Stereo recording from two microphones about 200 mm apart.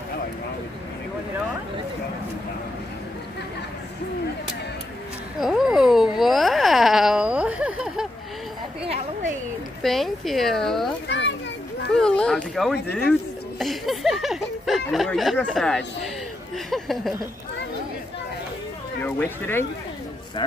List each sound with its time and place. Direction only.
5.4 s a sound: centre (ahead or behind)
8.8 s a sound: 30° right (ahead or behind)
9.8 s speech: centre (ahead or behind)
11.1 s children playing: 60° left (ahead or behind)
12.0 s speech: 5° left (ahead or behind)
19.0 s speech: 10° left (ahead or behind)